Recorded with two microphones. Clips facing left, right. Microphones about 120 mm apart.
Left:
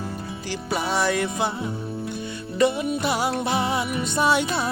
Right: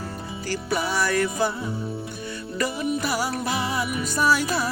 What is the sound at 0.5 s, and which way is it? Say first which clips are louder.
Music: even; 20° left (ahead or behind).